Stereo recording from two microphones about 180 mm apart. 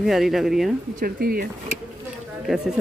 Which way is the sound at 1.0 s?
55° right (ahead or behind).